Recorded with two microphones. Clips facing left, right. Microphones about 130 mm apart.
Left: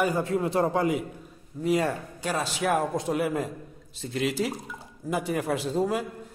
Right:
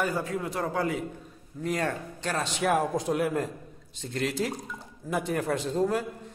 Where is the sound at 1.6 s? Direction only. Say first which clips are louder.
Left 4 dB; 5° left (ahead or behind).